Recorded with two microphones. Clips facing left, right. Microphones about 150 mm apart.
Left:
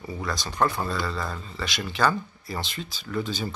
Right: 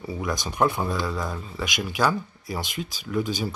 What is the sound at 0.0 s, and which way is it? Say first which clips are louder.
Speech: right 3 dB; 15° right (ahead or behind).